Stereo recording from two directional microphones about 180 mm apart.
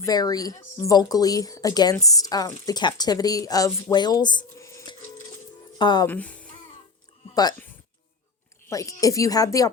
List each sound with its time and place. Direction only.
0.0 s speech: 20° left (ahead or behind)
6.1 s speech: 10° left (ahead or behind)
8.7 s speech: 20° left (ahead or behind)